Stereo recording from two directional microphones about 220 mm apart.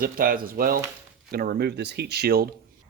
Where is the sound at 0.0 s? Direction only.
40° right (ahead or behind).